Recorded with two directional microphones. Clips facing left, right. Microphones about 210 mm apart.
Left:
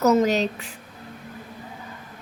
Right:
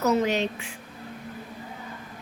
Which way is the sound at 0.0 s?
40° left (ahead or behind).